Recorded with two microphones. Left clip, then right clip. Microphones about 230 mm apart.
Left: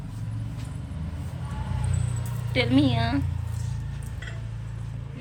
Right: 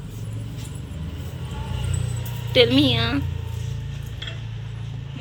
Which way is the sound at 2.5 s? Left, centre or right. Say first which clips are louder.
Right 7 dB; centre.